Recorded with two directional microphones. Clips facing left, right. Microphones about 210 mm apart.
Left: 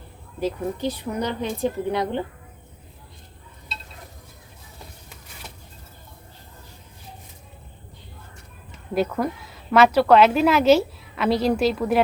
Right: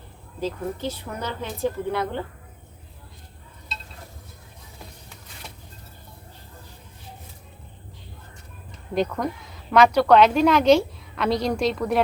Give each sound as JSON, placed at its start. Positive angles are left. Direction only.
{"t": 0.3, "sound": "speech", "side_deg": 15}
{"t": 9.0, "sound": "a woman's voice", "side_deg": 5}